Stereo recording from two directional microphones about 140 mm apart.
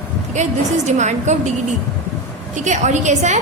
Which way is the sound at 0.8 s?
55° right (ahead or behind).